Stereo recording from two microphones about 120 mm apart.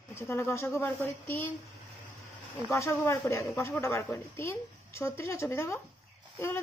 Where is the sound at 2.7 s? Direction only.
25° left (ahead or behind).